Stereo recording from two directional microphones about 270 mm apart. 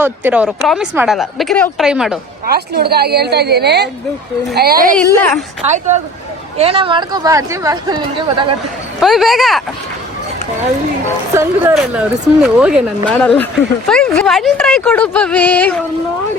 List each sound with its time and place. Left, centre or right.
0.0 s speech: centre
2.5 s a woman's voice: right
4.9 s speech: centre
5.6 s speech: right
9.0 s speech: centre
11.3 s speech: centre